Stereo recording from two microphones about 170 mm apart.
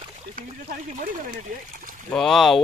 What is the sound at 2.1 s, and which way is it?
Speech, centre (ahead or behind).